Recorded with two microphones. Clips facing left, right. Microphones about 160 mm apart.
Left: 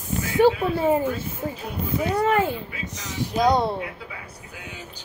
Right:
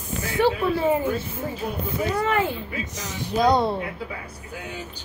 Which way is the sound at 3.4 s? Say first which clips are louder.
Right 1 dB; 15° left (ahead or behind).